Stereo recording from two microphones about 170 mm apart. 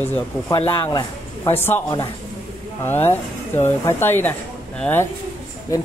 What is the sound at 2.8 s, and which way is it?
Speech, 15° left (ahead or behind).